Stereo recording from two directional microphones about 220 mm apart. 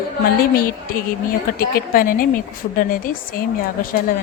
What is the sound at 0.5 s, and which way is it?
A woman's voice, 40° left (ahead or behind).